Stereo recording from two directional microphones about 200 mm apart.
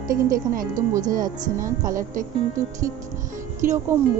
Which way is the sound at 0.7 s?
15° right (ahead or behind).